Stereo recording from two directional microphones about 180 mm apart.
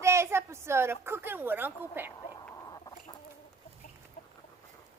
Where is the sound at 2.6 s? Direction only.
20° left (ahead or behind).